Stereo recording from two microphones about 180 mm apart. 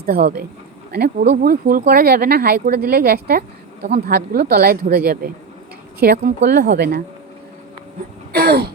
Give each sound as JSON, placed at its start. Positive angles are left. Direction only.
{"t": 0.0, "sound": "speech", "side_deg": -60}
{"t": 1.9, "sound": "a woman's voice", "side_deg": -55}
{"t": 6.7, "sound": "speech", "side_deg": -65}
{"t": 8.3, "sound": "speech", "side_deg": -60}